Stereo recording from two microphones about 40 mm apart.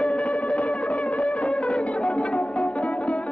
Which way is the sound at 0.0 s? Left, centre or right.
Left.